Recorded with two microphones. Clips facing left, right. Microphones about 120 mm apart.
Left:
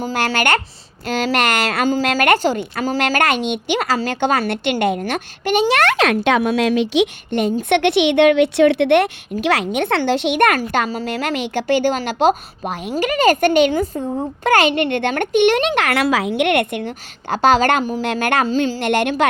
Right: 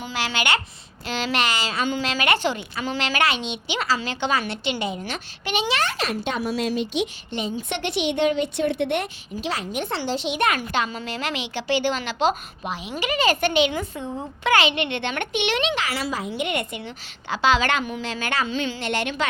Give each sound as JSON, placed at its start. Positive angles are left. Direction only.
{"t": 0.0, "sound": "a woman's voice", "side_deg": 45}
{"t": 1.9, "sound": "a woman's voice", "side_deg": 45}
{"t": 5.8, "sound": "speech", "side_deg": 80}
{"t": 7.3, "sound": "a woman's voice", "side_deg": 60}
{"t": 10.6, "sound": "a woman's voice", "side_deg": 40}
{"t": 18.0, "sound": "a woman's voice", "side_deg": 55}
{"t": 18.4, "sound": "a woman's voice", "side_deg": 40}
{"t": 18.8, "sound": "a woman's voice", "side_deg": 55}